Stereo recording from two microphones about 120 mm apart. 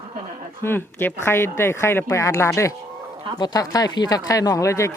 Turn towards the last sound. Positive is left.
turn(degrees=25)  # may be behind; listen again after turning